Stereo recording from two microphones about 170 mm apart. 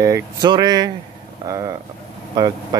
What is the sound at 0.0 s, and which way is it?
Speech, 20° right (ahead or behind).